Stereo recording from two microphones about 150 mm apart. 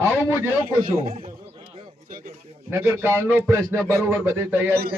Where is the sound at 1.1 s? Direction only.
90° right.